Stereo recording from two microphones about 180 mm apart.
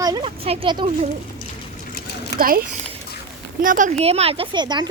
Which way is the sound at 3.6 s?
45° right (ahead or behind).